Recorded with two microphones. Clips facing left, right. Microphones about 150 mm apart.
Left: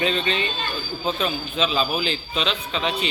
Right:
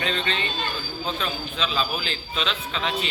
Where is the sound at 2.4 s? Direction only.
Centre (ahead or behind).